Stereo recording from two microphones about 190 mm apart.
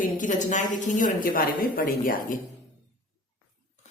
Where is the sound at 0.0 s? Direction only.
40° left (ahead or behind).